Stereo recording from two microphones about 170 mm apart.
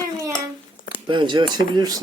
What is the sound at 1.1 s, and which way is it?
Speech, 30° right (ahead or behind).